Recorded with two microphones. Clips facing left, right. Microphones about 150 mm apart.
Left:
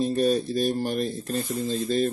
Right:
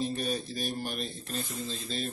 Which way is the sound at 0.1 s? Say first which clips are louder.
Left 11 dB; 45° left (ahead or behind).